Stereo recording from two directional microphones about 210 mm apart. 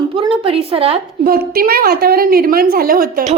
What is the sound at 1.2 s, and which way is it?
A woman's voice, 45° right (ahead or behind).